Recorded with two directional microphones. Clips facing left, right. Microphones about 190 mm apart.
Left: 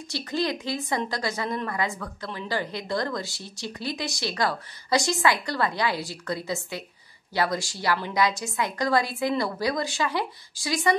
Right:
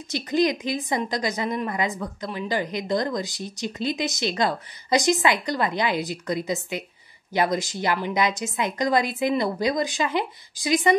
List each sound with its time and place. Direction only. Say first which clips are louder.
0.1 s a woman's voice: right 6 dB; 20° right (ahead or behind)